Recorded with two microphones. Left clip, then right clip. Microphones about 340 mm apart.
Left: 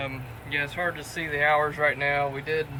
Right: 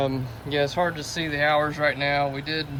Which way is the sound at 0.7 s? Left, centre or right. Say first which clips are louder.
Right 4 dB; left.